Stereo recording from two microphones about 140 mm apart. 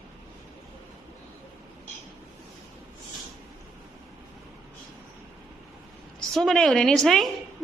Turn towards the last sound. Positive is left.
turn(degrees=5)  # may be behind; listen again after turning